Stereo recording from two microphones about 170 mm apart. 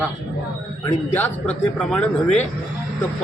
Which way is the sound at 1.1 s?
10° left (ahead or behind).